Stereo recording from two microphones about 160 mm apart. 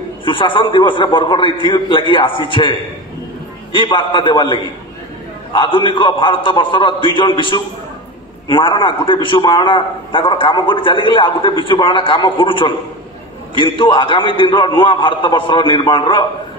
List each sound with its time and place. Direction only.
0.2 s a man's voice: 30° left (ahead or behind)